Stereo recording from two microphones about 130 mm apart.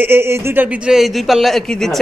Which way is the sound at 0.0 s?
20° right (ahead or behind).